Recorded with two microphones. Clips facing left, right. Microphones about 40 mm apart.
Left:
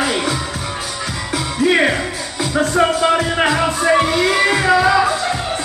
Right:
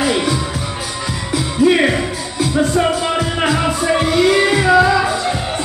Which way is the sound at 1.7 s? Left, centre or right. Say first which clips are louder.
Left 2 dB; centre.